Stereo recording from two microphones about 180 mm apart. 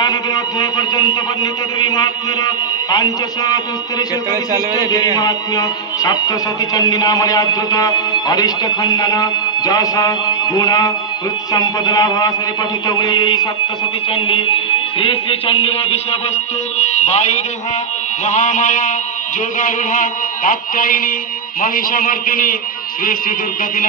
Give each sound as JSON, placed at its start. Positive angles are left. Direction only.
{"t": 0.0, "sound": "music", "side_deg": 20}
{"t": 4.7, "sound": "music", "side_deg": 20}
{"t": 16.7, "sound": "speech", "side_deg": 40}
{"t": 18.2, "sound": "a sound", "side_deg": 45}